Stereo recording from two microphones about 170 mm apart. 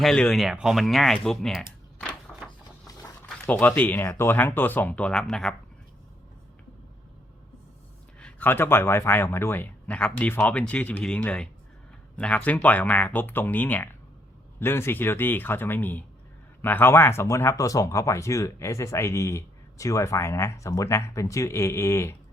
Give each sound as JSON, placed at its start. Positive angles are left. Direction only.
{"t": 0.0, "sound": "speech", "side_deg": 0}
{"t": 2.3, "sound": "a sound", "side_deg": 10}
{"t": 3.4, "sound": "speech", "side_deg": 10}
{"t": 8.2, "sound": "speech", "side_deg": 10}